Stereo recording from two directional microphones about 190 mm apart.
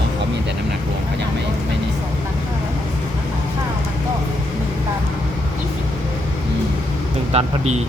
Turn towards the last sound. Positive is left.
turn(degrees=-35)  # may be behind; listen again after turning